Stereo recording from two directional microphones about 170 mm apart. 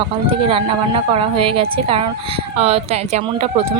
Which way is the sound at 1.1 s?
35° right (ahead or behind).